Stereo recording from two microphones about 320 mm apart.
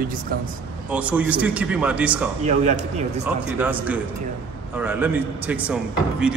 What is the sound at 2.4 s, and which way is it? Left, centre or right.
Speech, right.